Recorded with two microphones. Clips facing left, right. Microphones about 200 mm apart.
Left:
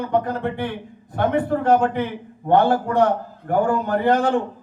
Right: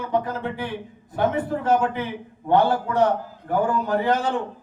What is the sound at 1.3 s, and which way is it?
Speech, 60° left (ahead or behind).